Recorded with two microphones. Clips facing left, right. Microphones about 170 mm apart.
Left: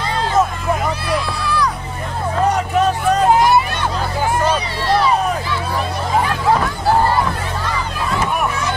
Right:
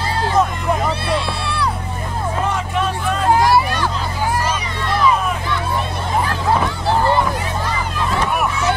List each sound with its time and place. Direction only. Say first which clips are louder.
1.0 s a sound: even; 30° right (ahead or behind)
2.4 s vehicle: left 8 dB; 40° left (ahead or behind)
3.3 s hubbub: right 2 dB; 20° left (ahead or behind)
4.5 s music: left 4 dB; 35° left (ahead or behind)